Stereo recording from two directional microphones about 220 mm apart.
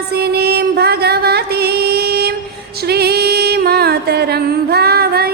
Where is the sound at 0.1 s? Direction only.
45° right (ahead or behind).